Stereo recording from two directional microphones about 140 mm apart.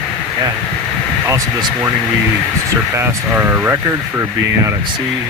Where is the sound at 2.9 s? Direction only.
15° right (ahead or behind).